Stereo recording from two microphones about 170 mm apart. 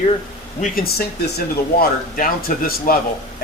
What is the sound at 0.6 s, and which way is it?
Speech, 60° left (ahead or behind).